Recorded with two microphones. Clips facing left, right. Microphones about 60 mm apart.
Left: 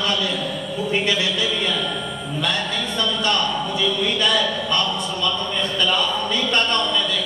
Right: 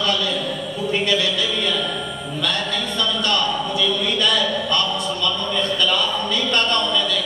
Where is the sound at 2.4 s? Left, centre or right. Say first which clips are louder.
Even; left.